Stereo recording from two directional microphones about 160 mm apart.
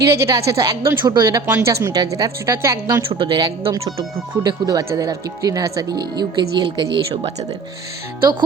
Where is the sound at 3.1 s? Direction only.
35° right (ahead or behind).